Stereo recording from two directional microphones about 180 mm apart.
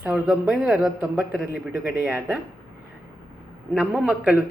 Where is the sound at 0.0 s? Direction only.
5° right (ahead or behind).